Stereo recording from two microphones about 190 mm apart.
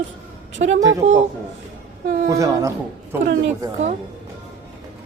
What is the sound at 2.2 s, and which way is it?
Speech, 15° right (ahead or behind).